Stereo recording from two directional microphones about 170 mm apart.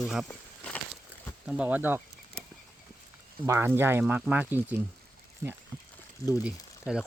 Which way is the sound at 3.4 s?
15° right (ahead or behind).